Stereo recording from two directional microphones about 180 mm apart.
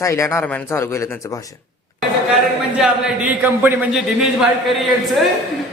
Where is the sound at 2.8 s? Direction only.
10° right (ahead or behind).